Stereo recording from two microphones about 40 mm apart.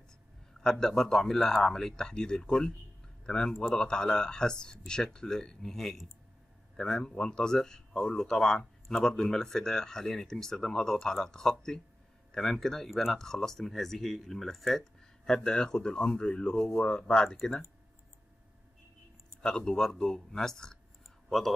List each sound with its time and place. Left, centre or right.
0.6 s speech: centre
13.2 s speech: centre
19.4 s speech: centre